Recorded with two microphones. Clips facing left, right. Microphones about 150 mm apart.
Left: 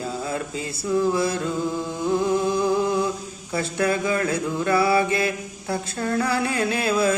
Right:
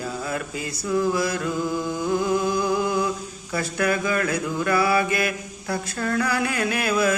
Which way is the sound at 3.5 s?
25° left (ahead or behind).